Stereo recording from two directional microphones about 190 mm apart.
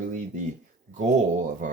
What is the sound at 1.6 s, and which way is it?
Speech, 40° right (ahead or behind).